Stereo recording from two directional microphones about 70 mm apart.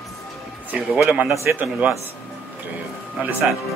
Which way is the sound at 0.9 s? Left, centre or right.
Centre.